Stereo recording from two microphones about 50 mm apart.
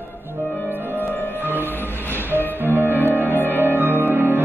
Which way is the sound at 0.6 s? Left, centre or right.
Right.